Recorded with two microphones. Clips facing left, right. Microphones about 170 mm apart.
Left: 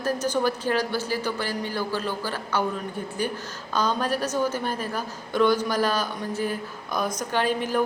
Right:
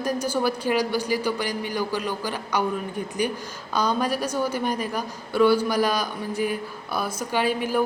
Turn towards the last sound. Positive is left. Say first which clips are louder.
# right 1 dB
turn(degrees=-10)  # may be behind; listen again after turning